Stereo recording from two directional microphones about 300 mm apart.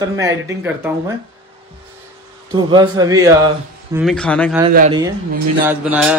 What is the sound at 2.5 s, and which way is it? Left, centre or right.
Speech, centre.